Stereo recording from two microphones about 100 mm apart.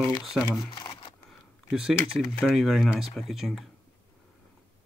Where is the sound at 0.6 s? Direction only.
50° left (ahead or behind).